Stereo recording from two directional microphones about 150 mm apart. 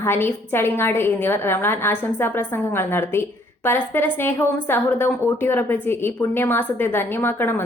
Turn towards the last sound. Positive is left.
turn(degrees=15)  # may be behind; listen again after turning